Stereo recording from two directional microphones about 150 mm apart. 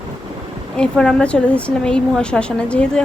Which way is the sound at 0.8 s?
5° left (ahead or behind).